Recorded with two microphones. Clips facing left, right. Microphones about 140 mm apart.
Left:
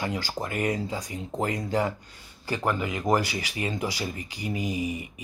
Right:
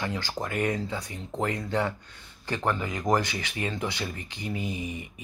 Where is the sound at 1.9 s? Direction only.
35° left (ahead or behind).